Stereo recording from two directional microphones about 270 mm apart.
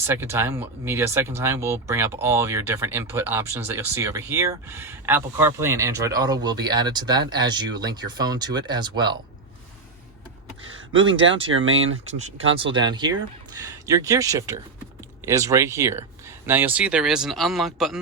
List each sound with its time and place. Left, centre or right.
0.1 s speech: centre
11.4 s speech: right
12.5 s speech: centre